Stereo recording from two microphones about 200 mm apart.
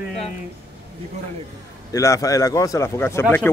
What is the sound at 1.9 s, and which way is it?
Speech, 15° left (ahead or behind).